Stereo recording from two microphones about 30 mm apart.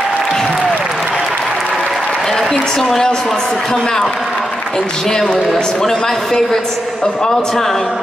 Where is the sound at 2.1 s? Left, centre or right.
Centre.